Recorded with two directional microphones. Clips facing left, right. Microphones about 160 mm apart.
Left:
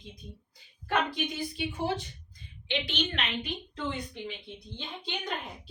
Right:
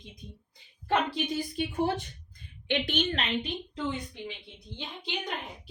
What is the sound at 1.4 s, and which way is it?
A woman's voice, 45° right (ahead or behind).